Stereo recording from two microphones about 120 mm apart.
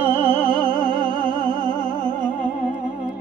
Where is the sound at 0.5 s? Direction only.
40° right (ahead or behind).